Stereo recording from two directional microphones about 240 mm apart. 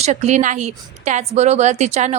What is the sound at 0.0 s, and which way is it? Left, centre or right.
A woman's voice, right.